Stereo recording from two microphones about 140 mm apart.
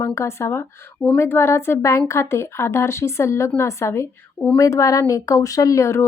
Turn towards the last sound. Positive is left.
turn(degrees=20)  # may be behind; listen again after turning